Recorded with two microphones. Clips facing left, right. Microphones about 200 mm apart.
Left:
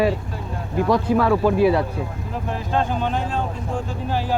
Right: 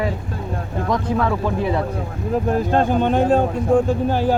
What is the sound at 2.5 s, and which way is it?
Speech, 50° right (ahead or behind).